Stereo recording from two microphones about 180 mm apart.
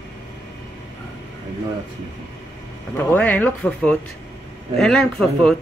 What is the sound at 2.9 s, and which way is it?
Speech, 10° left (ahead or behind).